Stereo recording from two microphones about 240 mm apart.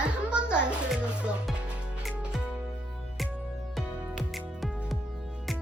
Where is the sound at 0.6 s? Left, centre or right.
Centre.